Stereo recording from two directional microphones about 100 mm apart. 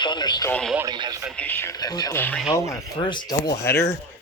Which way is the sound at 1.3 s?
15° left (ahead or behind).